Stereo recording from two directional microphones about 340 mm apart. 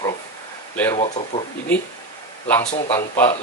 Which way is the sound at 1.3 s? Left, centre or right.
Centre.